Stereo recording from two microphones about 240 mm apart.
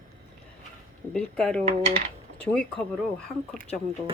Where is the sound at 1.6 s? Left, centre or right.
Right.